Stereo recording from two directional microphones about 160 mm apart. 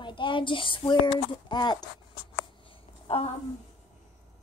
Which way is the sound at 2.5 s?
35° left (ahead or behind).